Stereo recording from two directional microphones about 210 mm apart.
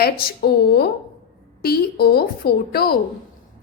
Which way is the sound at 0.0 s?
45° left (ahead or behind).